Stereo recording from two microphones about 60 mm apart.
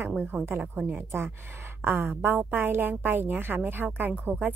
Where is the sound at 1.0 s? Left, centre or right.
Right.